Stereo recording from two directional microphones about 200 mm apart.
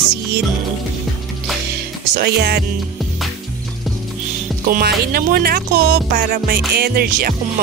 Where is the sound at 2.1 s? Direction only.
50° right (ahead or behind).